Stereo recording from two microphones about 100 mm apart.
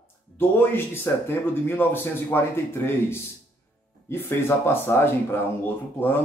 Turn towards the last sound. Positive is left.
turn(degrees=20)  # may be behind; listen again after turning